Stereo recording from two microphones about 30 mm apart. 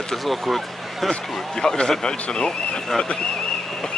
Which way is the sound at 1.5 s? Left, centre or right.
Left.